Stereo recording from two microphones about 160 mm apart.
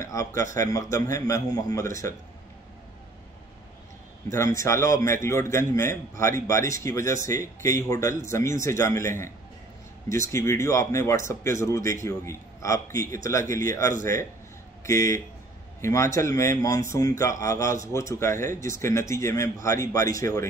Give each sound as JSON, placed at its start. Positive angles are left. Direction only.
{"t": 0.0, "sound": "a man's voice", "side_deg": 20}
{"t": 4.3, "sound": "a man's voice", "side_deg": 20}
{"t": 10.3, "sound": "a man's voice", "side_deg": 20}